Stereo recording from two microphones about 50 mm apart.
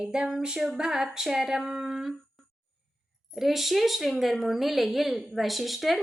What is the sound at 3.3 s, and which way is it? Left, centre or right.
Speech, centre.